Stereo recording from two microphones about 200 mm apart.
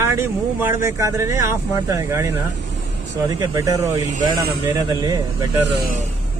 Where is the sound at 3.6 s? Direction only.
15° right (ahead or behind).